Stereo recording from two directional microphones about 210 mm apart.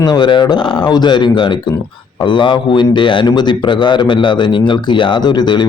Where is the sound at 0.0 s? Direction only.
20° left (ahead or behind).